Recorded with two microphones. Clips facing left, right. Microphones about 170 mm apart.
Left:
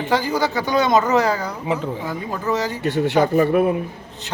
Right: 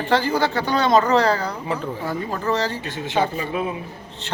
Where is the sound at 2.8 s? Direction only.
65° left (ahead or behind).